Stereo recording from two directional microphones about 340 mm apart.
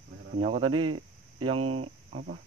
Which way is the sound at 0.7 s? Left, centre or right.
Right.